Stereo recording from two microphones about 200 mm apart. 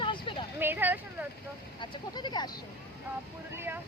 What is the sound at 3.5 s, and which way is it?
Speech, 10° right (ahead or behind).